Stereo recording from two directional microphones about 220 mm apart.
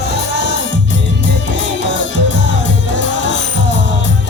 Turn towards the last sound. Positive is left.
turn(degrees=55)  # may be behind; listen again after turning